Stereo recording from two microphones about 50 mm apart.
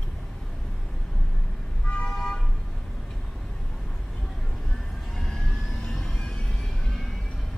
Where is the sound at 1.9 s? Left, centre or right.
Left.